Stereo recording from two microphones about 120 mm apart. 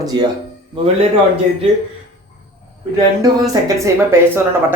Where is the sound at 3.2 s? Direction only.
30° right (ahead or behind).